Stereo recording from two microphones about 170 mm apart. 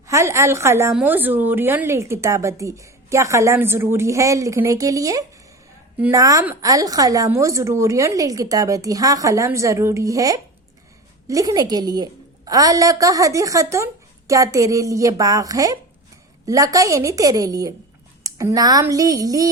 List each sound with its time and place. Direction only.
0.1 s a woman's voice: 15° right (ahead or behind)